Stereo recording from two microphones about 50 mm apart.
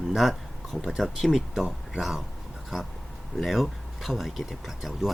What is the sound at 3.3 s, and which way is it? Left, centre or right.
Speech, centre.